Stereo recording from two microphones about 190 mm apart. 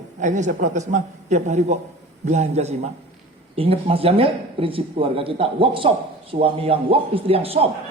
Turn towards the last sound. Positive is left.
turn(degrees=-30)  # may be behind; listen again after turning